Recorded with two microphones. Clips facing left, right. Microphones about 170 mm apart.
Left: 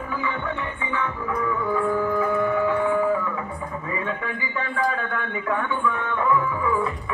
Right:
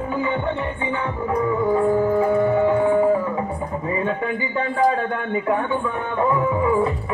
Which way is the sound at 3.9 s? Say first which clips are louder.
Right 6 dB; 30° right (ahead or behind).